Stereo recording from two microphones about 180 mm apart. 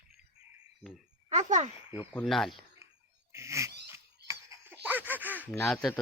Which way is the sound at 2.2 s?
Centre (ahead or behind).